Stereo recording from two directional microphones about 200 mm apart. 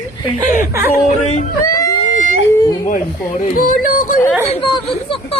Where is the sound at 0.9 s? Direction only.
35° left (ahead or behind).